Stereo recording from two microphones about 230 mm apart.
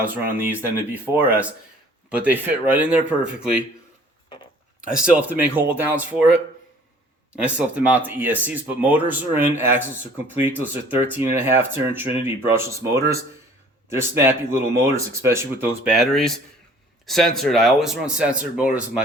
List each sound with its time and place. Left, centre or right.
0.1 s speech: centre
5.0 s speech: centre
7.4 s speech: centre